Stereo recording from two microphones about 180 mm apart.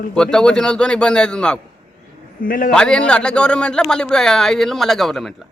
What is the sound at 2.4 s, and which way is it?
Speech, 50° left (ahead or behind).